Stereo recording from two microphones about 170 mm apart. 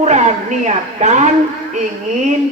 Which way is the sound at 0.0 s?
40° right (ahead or behind).